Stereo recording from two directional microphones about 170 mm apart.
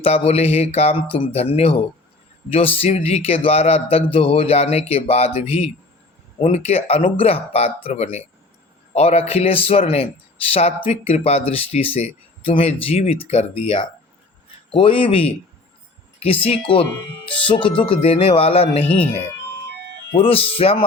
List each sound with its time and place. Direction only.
0.0 s speech: 35° left (ahead or behind)
20.1 s speech: 35° left (ahead or behind)